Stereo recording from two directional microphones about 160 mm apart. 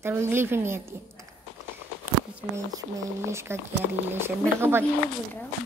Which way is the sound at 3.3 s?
15° right (ahead or behind).